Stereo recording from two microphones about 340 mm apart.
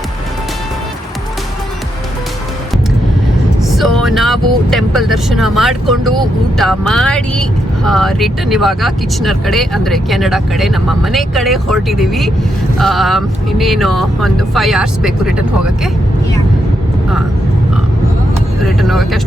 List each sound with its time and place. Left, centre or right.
3.6 s speech: centre
18.6 s speech: centre